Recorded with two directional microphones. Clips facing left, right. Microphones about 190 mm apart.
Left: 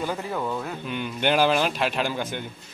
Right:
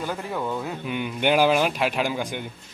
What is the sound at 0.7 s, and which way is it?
A man's voice, 10° right (ahead or behind).